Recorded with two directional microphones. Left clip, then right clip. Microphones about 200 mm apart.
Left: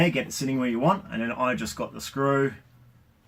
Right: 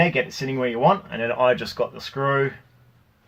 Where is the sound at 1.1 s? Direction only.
35° right (ahead or behind).